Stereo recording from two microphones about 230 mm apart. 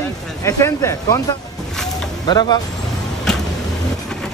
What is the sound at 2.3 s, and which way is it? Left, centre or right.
Speech, centre.